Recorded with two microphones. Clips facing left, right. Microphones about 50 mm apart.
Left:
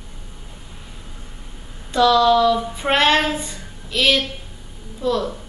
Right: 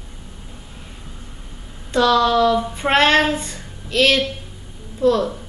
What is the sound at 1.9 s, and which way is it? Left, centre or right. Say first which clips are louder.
A woman's voice: left 1 dB; centre.